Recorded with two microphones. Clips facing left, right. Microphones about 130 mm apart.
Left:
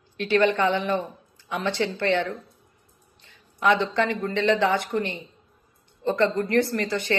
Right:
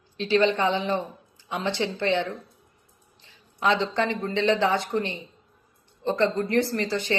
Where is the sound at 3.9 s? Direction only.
20° right (ahead or behind).